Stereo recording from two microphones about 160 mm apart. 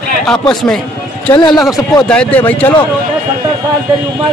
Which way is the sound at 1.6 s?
5° left (ahead or behind).